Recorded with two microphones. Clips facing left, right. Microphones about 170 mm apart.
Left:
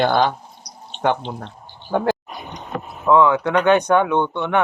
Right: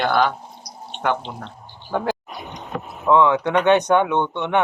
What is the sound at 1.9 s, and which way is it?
Speech, 15° left (ahead or behind).